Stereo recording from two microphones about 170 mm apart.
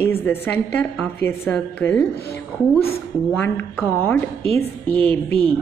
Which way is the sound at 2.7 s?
35° left (ahead or behind).